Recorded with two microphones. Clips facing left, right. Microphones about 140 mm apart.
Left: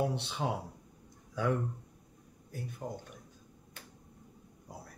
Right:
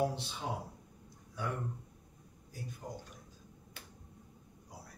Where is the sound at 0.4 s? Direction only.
75° left (ahead or behind).